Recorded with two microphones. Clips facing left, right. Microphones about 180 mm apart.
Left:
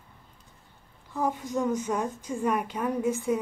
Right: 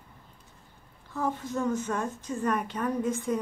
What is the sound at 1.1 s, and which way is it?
Speech, 15° left (ahead or behind).